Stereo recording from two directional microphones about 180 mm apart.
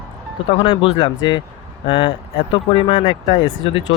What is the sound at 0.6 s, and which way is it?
Speech, 30° left (ahead or behind).